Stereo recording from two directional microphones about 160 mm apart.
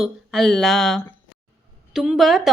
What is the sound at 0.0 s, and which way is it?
A woman's voice, centre (ahead or behind).